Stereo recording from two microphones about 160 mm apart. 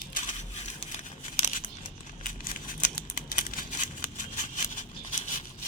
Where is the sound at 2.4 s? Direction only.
60° left (ahead or behind).